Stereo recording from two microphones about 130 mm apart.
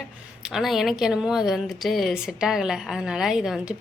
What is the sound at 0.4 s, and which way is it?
Speech, 5° right (ahead or behind).